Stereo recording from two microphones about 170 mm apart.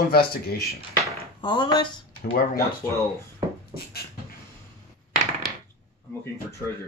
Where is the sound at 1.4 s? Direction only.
30° left (ahead or behind).